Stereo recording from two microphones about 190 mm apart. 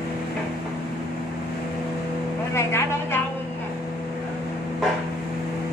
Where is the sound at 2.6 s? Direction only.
15° left (ahead or behind).